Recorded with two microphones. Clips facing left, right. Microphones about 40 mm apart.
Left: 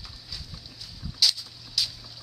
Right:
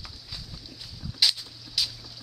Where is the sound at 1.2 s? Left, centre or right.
Right.